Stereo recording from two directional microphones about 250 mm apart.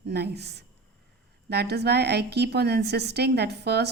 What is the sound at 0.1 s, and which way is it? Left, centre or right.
A woman's voice, right.